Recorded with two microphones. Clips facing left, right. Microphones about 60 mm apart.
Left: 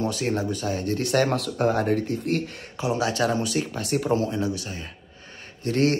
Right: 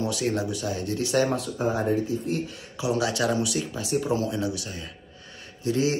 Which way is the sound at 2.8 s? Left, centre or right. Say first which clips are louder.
Left 1 dB; left.